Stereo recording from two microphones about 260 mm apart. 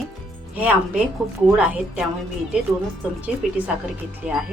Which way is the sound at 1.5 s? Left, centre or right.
Centre.